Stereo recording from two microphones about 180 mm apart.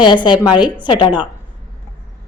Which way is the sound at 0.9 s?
25° left (ahead or behind).